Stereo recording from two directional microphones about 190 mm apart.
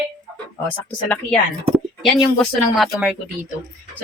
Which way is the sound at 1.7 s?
Centre (ahead or behind).